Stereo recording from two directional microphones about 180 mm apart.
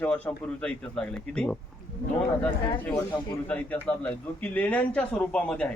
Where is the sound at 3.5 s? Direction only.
10° left (ahead or behind).